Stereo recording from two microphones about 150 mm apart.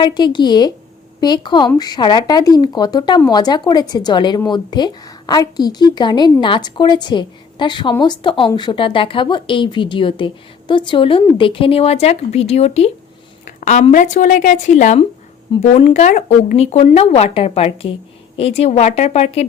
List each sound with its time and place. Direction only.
0.0 s a woman's voice: 30° left (ahead or behind)
13.6 s a woman's voice: 55° left (ahead or behind)